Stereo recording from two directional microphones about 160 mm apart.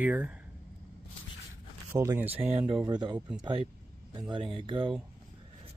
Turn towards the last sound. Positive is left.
turn(degrees=-30)  # may be behind; listen again after turning